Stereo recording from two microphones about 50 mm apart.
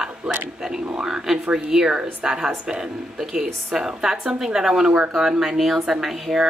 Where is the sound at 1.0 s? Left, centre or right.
Centre.